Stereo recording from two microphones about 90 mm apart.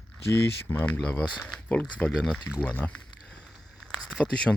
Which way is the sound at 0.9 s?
15° left (ahead or behind).